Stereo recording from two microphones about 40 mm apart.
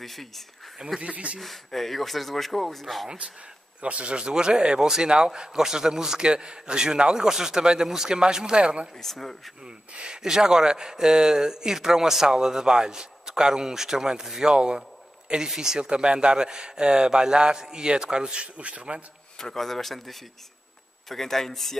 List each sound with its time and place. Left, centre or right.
0.0 s speech: centre
0.7 s speech: centre
1.0 s speech: right
1.4 s speech: centre
3.8 s speech: right
9.0 s speech: centre
9.9 s speech: centre
19.5 s speech: centre